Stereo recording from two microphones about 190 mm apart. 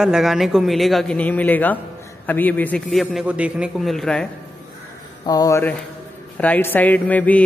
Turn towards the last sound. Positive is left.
turn(degrees=10)  # may be behind; listen again after turning